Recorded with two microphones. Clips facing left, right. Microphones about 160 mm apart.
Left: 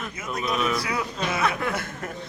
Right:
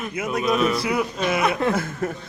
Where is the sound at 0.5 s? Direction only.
35° right (ahead or behind).